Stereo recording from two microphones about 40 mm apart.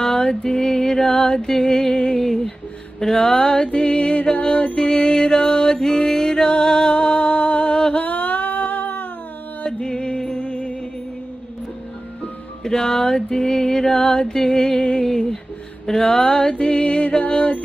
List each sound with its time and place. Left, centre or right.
0.0 s music: centre
8.0 s humming: left
9.7 s music: centre
12.6 s music: centre
15.9 s a sound: centre